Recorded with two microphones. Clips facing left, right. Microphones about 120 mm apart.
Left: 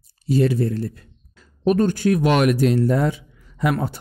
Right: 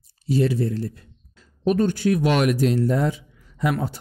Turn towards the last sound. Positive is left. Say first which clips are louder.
# left 2 dB
turn(degrees=60)  # may be behind; listen again after turning